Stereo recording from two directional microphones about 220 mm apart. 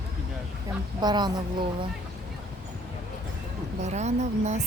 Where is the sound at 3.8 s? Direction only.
30° right (ahead or behind).